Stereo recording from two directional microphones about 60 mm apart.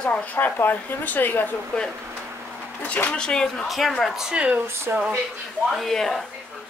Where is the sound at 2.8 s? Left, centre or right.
Left.